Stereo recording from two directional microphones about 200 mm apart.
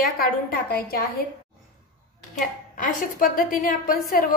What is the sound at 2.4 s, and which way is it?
A woman's voice, 45° left (ahead or behind).